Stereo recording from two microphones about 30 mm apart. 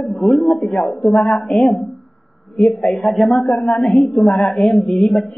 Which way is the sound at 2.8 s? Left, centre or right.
Left.